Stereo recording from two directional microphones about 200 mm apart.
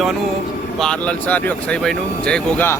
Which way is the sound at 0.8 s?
5° left (ahead or behind).